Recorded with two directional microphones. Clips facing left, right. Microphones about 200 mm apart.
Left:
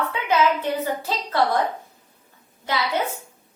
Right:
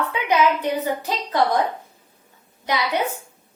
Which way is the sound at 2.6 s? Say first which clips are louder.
Right 2 dB; 15° right (ahead or behind).